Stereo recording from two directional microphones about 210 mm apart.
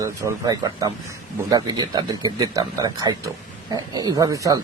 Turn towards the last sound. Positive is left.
turn(degrees=-15)  # may be behind; listen again after turning